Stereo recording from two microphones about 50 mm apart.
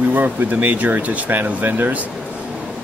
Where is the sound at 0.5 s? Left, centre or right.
Right.